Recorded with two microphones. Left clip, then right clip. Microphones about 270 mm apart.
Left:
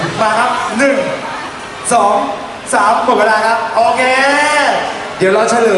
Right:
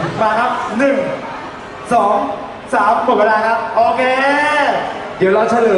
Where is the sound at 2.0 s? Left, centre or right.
Right.